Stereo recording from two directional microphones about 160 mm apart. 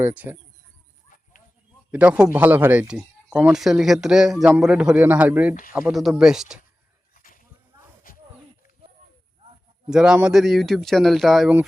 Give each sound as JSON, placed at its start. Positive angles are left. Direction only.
{"t": 0.0, "sound": "speech", "side_deg": -10}
{"t": 1.9, "sound": "a man's voice", "side_deg": -10}
{"t": 7.1, "sound": "goat", "side_deg": 60}
{"t": 9.9, "sound": "a man's voice", "side_deg": -5}